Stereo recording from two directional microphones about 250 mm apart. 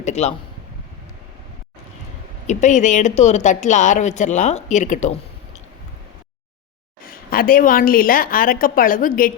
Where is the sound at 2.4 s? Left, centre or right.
Left.